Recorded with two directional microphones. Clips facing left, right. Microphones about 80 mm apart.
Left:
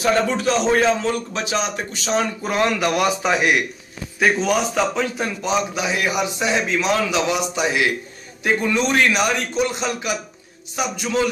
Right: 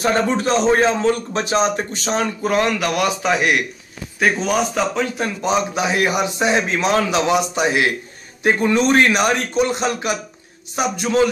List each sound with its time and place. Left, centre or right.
0.0 s a man's voice: right
2.1 s speech: centre
5.4 s a man's voice: right